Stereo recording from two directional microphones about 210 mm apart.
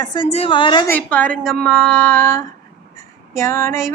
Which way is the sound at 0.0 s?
20° left (ahead or behind).